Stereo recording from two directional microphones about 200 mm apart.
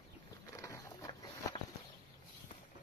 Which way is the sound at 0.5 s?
15° left (ahead or behind).